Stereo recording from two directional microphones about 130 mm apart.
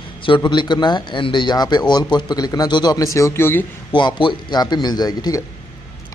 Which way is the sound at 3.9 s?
35° left (ahead or behind).